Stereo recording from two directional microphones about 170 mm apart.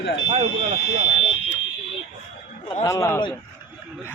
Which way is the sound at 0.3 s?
35° right (ahead or behind).